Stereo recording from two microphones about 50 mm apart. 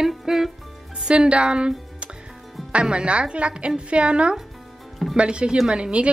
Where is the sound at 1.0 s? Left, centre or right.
Centre.